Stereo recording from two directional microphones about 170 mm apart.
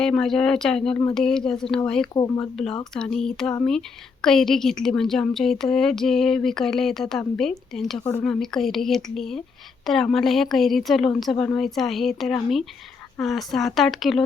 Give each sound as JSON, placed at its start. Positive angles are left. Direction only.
{"t": 0.0, "sound": "a woman's voice", "side_deg": 5}
{"t": 2.1, "sound": "speech", "side_deg": 20}
{"t": 2.9, "sound": "a woman's voice", "side_deg": 5}